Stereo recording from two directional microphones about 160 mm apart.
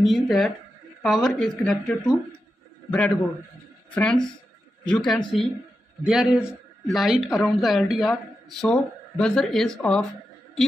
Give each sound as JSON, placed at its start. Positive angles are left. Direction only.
{"t": 0.0, "sound": "speech", "side_deg": 0}
{"t": 3.9, "sound": "speech", "side_deg": 5}